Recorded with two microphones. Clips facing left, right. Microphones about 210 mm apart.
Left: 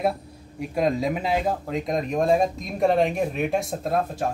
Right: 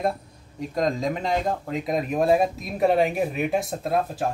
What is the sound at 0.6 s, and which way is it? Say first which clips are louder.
Speech: left 1 dB; 10° left (ahead or behind).